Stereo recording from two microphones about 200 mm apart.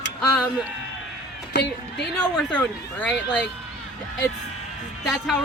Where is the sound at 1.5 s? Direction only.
55° left (ahead or behind).